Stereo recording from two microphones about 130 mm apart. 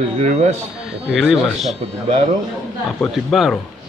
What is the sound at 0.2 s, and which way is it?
Speech, 60° right (ahead or behind).